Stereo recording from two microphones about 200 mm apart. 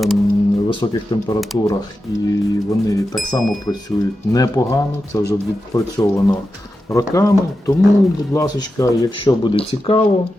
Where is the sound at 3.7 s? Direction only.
15° left (ahead or behind).